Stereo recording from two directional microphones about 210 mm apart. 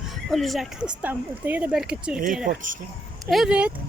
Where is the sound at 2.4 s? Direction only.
40° right (ahead or behind).